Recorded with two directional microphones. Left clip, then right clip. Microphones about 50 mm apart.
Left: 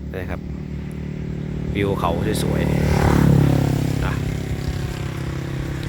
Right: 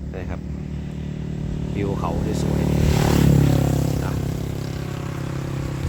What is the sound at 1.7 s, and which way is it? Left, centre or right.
Speech, left.